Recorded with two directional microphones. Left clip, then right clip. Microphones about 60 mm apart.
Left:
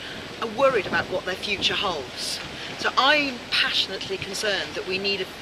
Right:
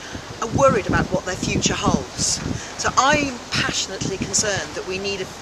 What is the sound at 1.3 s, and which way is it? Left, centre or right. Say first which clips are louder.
Speech: right 1 dB; centre.